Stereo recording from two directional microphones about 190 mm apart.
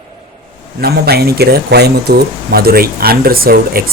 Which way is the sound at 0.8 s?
55° right (ahead or behind).